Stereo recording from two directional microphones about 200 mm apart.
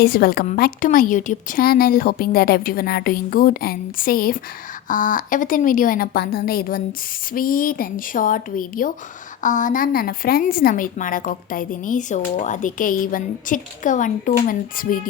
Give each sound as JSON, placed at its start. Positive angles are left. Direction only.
{"t": 0.0, "sound": "a woman's voice", "side_deg": 50}